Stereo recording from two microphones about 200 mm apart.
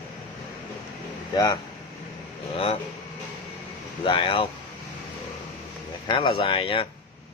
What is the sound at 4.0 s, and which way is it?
Speech, 25° left (ahead or behind).